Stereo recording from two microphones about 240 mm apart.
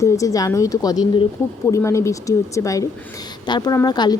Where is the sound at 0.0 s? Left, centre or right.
Centre.